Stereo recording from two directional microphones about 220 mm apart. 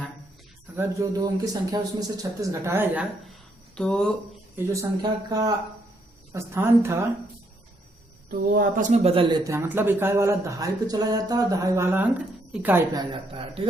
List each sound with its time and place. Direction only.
0.8 s speech: 15° right (ahead or behind); by 4.1 s 5° left (ahead or behind)
4.5 s speech: 15° right (ahead or behind)
8.3 s speech: 40° right (ahead or behind)
9.4 s speech: 10° right (ahead or behind)
12.9 s speech: 20° right (ahead or behind)